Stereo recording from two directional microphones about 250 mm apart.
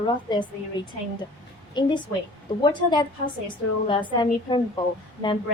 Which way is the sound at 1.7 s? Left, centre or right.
Centre.